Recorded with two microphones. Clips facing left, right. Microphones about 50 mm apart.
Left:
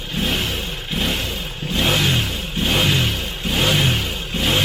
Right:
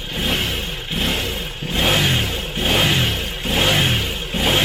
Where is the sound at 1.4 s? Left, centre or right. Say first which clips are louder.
Left 1 dB; centre.